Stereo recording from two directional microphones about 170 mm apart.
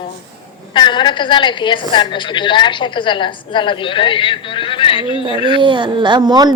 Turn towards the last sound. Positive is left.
turn(degrees=-25)  # may be behind; listen again after turning